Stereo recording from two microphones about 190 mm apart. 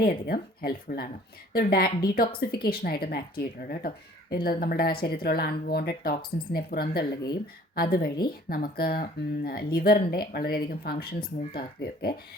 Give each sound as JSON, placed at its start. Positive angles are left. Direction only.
{"t": 0.0, "sound": "speech", "side_deg": 50}